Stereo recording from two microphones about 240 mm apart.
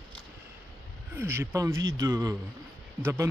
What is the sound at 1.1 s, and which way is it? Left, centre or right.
Speech, centre.